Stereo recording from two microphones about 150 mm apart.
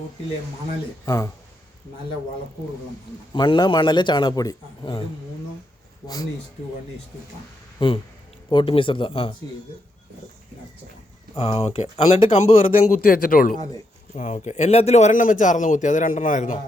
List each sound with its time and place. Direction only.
1.0 s speech: 20° left (ahead or behind)
3.3 s a man's voice: 30° left (ahead or behind)
7.8 s a man's voice: 35° left (ahead or behind)
11.3 s a man's voice: 40° left (ahead or behind)
13.0 s speech: 70° left (ahead or behind)
14.1 s a man's voice: 55° left (ahead or behind)